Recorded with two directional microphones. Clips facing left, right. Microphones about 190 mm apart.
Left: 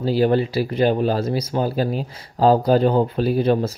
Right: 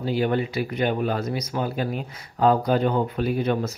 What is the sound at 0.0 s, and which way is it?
Speech, 35° left (ahead or behind).